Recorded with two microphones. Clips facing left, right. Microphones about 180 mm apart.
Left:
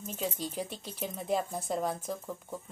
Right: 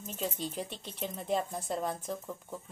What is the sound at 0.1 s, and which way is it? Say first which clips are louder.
A woman's voice: even; centre (ahead or behind).